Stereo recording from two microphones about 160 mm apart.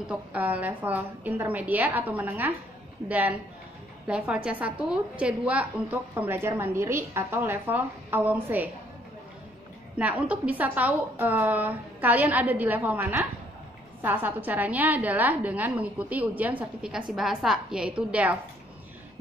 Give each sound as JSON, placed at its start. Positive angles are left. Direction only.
{"t": 0.0, "sound": "a woman's voice", "side_deg": -10}
{"t": 9.9, "sound": "a woman's voice", "side_deg": -10}